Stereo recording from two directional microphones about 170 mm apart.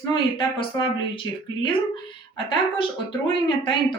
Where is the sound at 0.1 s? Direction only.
30° left (ahead or behind).